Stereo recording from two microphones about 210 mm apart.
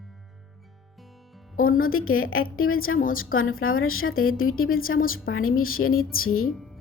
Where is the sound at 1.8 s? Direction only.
80° left.